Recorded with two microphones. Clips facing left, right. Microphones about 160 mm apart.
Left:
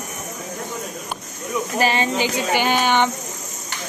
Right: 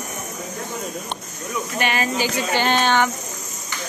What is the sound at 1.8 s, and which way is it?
Speech, 30° left (ahead or behind).